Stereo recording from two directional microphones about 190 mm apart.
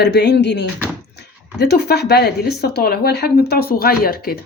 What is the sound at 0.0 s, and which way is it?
Speech, 65° left (ahead or behind).